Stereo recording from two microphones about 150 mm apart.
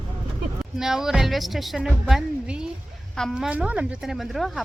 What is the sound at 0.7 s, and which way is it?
A woman's voice, 5° right (ahead or behind).